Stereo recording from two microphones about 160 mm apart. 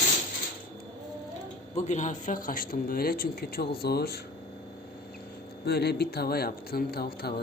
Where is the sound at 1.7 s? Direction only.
45° left (ahead or behind); by 4.2 s 80° left.